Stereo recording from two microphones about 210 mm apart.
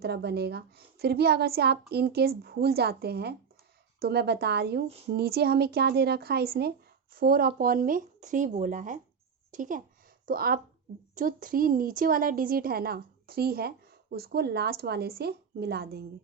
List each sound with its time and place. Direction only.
0.0 s a woman's voice: 50° right (ahead or behind)